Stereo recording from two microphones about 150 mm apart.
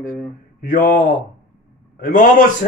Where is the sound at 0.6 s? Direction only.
65° left (ahead or behind).